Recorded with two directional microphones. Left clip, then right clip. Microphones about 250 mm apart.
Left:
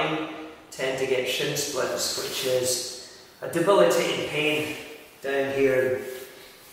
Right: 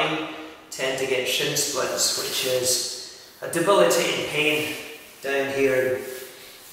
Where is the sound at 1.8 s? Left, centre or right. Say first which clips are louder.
Right 3 dB; centre.